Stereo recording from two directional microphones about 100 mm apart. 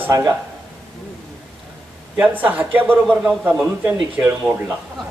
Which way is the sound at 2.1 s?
15° right (ahead or behind).